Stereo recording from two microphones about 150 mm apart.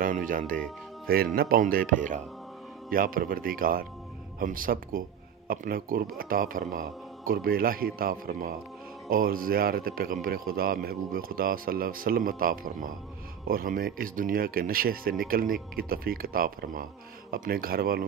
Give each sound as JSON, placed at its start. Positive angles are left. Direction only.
{"t": 0.0, "sound": "music", "side_deg": -65}
{"t": 1.0, "sound": "a man's voice", "side_deg": -90}
{"t": 2.9, "sound": "a man's voice", "side_deg": -70}